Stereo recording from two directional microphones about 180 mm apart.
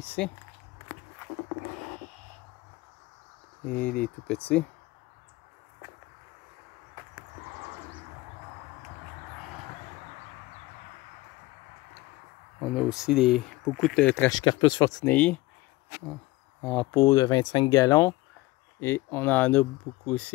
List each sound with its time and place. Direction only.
0.0 s speech: 10° left (ahead or behind)
3.6 s speech: 10° left (ahead or behind)
12.5 s speech: 5° right (ahead or behind)
14.3 s speech: 25° left (ahead or behind)
15.0 s speech: 5° left (ahead or behind)
16.6 s speech: 10° left (ahead or behind)